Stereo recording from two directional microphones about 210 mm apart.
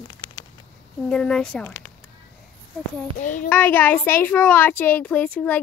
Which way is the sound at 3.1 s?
40° left (ahead or behind).